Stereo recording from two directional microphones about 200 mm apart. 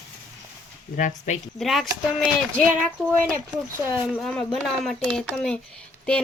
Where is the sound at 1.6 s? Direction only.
Centre (ahead or behind).